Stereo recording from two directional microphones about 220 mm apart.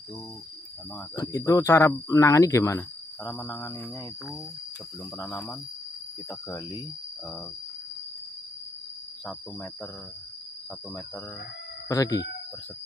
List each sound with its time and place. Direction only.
1.1 s speech: 15° left (ahead or behind)
5.1 s speech: 10° left (ahead or behind)
11.9 s speech: 15° left (ahead or behind)